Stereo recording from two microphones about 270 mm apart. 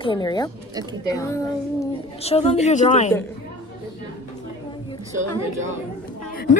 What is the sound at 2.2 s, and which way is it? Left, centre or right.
Speech, left.